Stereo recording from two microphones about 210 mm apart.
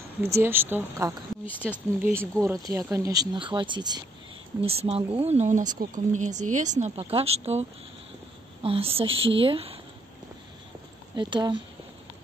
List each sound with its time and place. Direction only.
0.2 s a woman's voice: 10° right (ahead or behind); by 7.6 s 30° right (ahead or behind)
8.6 s a woman's voice: 25° right (ahead or behind)
11.1 s a woman's voice: 20° right (ahead or behind)